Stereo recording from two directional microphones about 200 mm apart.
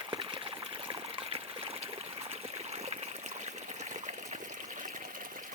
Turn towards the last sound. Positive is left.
turn(degrees=-35)  # may be behind; listen again after turning